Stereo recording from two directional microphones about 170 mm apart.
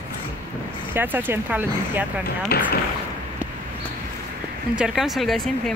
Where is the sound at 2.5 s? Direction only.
70° left (ahead or behind).